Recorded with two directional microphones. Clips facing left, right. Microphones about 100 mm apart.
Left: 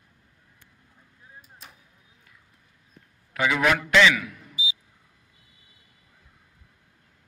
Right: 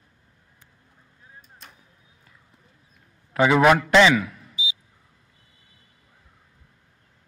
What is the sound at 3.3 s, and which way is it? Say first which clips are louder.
A man's voice: right 6 dB; 35° right (ahead or behind).